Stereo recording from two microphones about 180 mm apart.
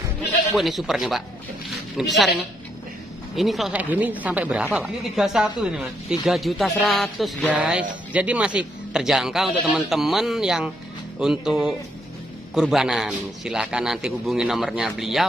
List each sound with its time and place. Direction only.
0.6 s speech: centre (ahead or behind)
3.3 s speech: centre (ahead or behind)